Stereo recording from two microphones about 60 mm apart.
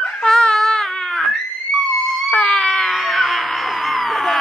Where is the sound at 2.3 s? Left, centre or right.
Centre.